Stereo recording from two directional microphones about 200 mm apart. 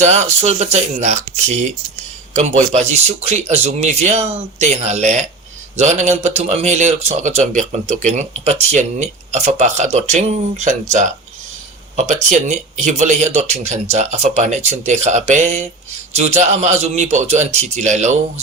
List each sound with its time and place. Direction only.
0.0 s speech: 35° right (ahead or behind)